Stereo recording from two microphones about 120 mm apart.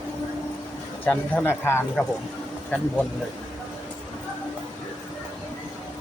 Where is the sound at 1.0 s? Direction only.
15° left (ahead or behind).